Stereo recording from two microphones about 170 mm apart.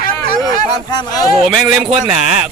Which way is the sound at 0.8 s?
25° left (ahead or behind).